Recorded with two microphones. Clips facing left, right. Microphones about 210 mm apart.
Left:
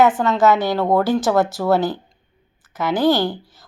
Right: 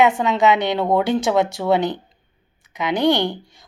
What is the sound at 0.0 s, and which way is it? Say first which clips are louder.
Speech: left 1 dB; centre (ahead or behind).